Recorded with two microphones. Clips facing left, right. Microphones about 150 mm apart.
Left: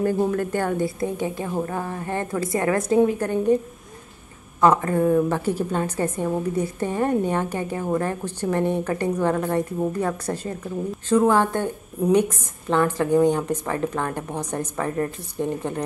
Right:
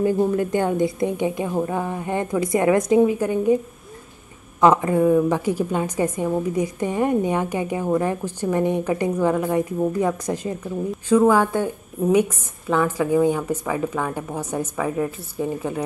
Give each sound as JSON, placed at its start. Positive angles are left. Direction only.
{"t": 0.3, "sound": "a woman's voice", "side_deg": -15}
{"t": 4.6, "sound": "a woman's voice", "side_deg": -15}